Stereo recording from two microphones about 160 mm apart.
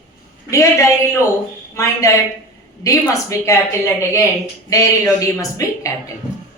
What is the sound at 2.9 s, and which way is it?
A woman's voice, 20° left (ahead or behind).